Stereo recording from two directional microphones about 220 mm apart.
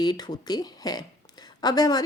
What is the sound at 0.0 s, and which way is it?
Speech, 20° left (ahead or behind).